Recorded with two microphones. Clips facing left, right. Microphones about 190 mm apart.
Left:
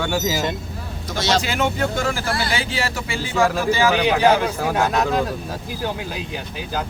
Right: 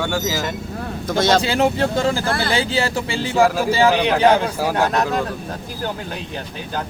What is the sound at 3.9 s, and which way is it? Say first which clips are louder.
Speech: left 1 dB; 5° left (ahead or behind).